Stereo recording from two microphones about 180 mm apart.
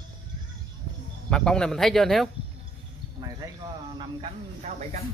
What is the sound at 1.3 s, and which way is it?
Speech, 5° left (ahead or behind).